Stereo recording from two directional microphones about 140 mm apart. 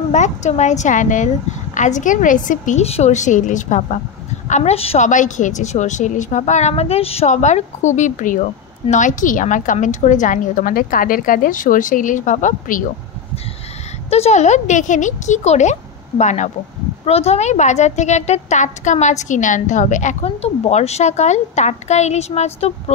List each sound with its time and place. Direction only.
0.1 s a woman's voice: 55° left (ahead or behind)
5.0 s a woman's voice: 65° left (ahead or behind)
14.1 s a woman's voice: 50° left (ahead or behind)
17.0 s a woman's voice: 45° left (ahead or behind)
20.2 s a woman's voice: 45° left (ahead or behind)